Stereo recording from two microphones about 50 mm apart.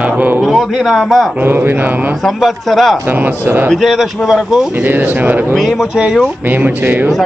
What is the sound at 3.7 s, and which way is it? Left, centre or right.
Speech, centre.